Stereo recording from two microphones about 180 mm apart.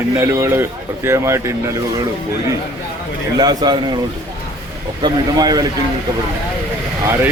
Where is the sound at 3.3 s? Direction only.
20° right (ahead or behind).